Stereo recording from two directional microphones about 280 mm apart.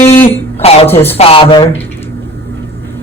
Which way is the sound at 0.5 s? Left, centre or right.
Left.